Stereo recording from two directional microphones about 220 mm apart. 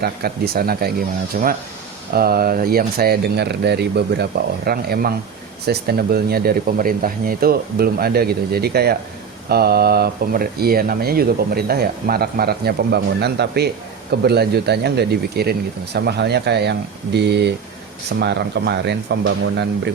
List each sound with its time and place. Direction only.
0.0 s speech: 45° right (ahead or behind)